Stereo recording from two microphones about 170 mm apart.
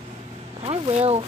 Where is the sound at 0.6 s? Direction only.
35° right (ahead or behind).